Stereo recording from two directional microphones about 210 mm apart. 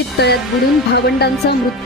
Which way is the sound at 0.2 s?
50° left (ahead or behind).